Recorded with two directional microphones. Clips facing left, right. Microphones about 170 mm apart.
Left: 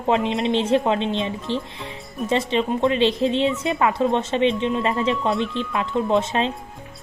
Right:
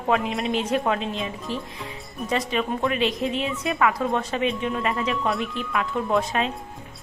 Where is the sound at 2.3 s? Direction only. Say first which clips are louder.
Left 4 dB; 25° left (ahead or behind).